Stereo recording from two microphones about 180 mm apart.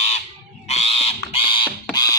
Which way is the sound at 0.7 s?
35° left (ahead or behind).